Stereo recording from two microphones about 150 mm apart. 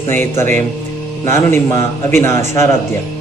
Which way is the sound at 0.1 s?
15° left (ahead or behind).